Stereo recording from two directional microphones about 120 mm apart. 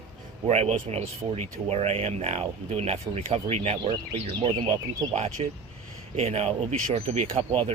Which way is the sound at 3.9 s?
45° right (ahead or behind).